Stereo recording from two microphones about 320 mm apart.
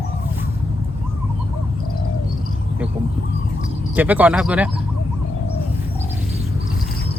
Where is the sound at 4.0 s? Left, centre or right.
Centre.